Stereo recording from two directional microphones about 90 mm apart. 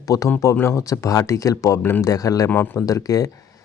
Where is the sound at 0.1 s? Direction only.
45° left (ahead or behind).